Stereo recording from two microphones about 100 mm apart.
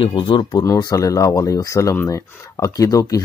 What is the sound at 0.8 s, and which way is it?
Speech, 40° left (ahead or behind).